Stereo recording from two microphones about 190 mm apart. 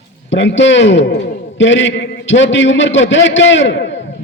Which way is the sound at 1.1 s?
50° left (ahead or behind).